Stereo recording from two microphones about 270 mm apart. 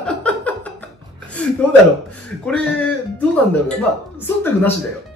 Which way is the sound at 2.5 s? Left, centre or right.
Centre.